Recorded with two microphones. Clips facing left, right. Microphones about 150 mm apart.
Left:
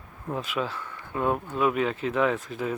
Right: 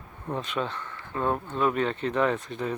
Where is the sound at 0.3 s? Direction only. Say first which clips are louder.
Even; 5° left (ahead or behind).